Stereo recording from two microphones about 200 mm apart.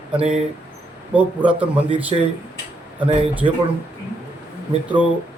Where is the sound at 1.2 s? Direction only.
5° right (ahead or behind).